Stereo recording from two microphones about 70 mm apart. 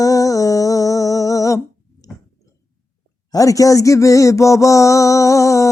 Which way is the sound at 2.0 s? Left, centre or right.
Left.